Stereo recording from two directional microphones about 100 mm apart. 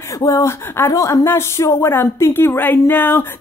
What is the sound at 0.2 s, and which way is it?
Speech, 35° left (ahead or behind).